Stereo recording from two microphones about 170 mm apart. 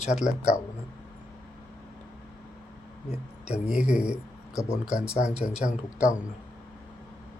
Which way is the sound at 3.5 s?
5° right (ahead or behind).